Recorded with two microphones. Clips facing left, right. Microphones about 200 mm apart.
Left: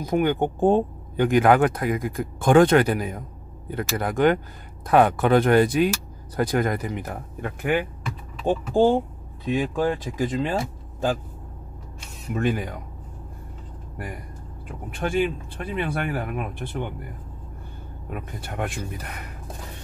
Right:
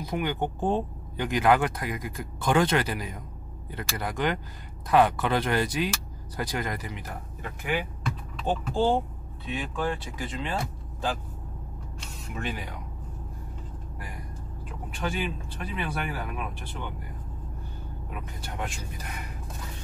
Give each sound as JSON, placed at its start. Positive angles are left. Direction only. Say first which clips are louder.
{"t": 0.0, "sound": "speech", "louder": "left 7 dB", "side_deg": 50}
{"t": 12.4, "sound": "speech", "louder": "left 10 dB", "side_deg": 50}
{"t": 15.0, "sound": "speech", "louder": "left 8 dB", "side_deg": 50}
{"t": 18.1, "sound": "speech", "louder": "left 6 dB", "side_deg": 55}